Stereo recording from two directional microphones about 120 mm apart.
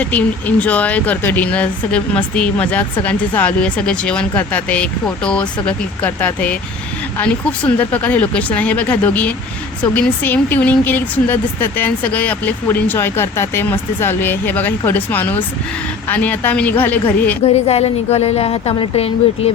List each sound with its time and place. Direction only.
0.0 s speech: 10° left (ahead or behind)
17.4 s a woman's voice: 60° left (ahead or behind)